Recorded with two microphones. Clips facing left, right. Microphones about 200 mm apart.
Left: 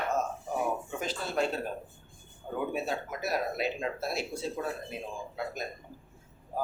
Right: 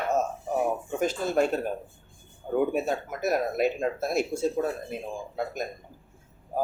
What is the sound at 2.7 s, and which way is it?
Speech, 50° right (ahead or behind).